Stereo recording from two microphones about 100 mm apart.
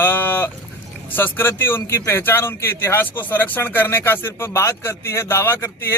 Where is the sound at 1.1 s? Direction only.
20° left (ahead or behind).